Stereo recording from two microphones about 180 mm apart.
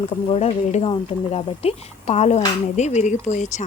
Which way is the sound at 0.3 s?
35° left (ahead or behind).